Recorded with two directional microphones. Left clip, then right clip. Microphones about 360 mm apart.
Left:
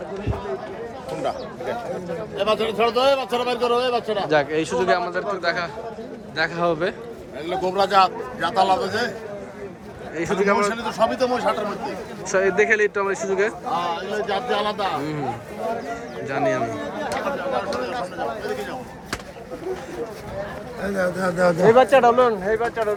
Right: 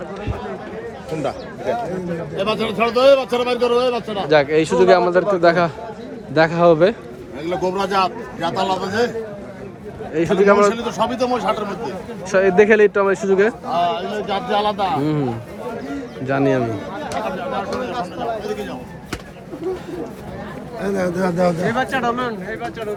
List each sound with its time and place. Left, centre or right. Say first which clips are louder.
2.4 s a man's voice: right 1 dB; centre
4.3 s speech: right 8 dB; centre
7.5 s a man's voice: left 1 dB; centre
10.2 s a man's voice: right 6 dB; centre
20.8 s a man's voice: right 2 dB; centre
21.7 s speech: left 6 dB; centre